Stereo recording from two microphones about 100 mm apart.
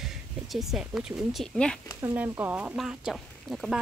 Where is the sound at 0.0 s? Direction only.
Centre (ahead or behind).